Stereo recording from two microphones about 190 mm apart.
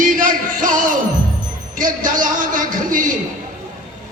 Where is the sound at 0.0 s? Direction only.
45° right (ahead or behind).